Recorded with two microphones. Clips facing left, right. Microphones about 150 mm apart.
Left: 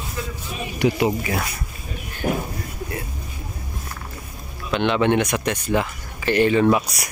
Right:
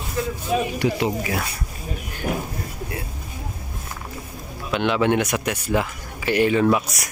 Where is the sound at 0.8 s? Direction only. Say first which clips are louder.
Left 5 dB; 20° left (ahead or behind).